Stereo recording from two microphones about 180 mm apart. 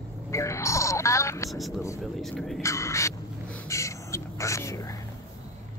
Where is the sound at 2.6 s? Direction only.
15° left (ahead or behind).